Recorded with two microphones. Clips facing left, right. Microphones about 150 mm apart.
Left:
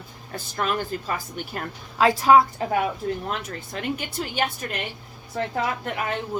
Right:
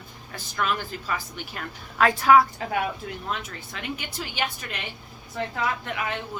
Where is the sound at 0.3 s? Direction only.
40° left (ahead or behind).